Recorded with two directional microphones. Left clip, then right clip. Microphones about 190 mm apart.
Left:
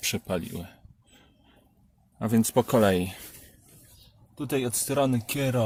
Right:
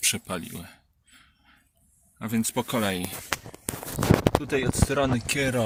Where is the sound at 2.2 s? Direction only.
30° left (ahead or behind).